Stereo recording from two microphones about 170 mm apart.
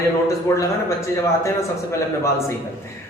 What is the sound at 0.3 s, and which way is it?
A man's voice, 15° left (ahead or behind).